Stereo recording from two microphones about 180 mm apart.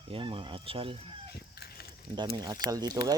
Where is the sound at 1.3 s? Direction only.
60° left (ahead or behind).